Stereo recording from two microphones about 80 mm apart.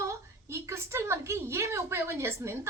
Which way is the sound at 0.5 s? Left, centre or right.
Right.